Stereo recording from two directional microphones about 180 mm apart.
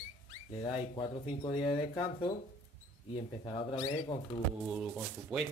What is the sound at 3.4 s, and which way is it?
Speech, 20° left (ahead or behind).